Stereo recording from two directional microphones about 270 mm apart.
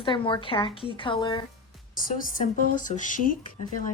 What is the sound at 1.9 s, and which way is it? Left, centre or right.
Speech, left.